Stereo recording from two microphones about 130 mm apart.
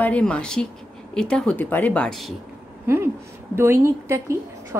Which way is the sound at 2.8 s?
20° right (ahead or behind).